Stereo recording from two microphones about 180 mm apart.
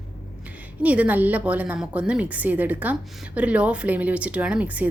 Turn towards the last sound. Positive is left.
turn(degrees=-5)  # may be behind; listen again after turning